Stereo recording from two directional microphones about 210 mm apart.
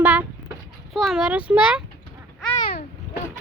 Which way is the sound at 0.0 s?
5° right (ahead or behind).